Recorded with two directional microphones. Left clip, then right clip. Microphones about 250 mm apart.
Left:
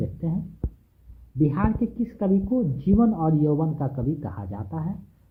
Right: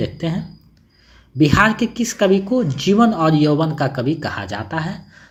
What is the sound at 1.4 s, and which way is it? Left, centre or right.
Speech, right.